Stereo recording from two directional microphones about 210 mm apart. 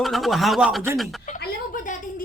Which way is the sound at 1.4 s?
40° left (ahead or behind).